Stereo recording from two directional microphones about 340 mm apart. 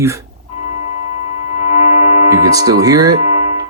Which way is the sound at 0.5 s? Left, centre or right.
Centre.